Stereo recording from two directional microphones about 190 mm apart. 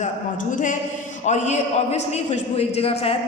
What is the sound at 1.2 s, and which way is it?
A man's voice, 35° left (ahead or behind).